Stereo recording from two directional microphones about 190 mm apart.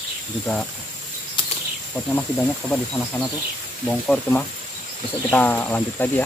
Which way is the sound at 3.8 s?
5° left (ahead or behind).